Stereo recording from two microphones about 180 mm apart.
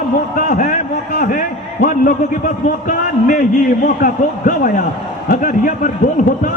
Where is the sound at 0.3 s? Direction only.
45° left (ahead or behind).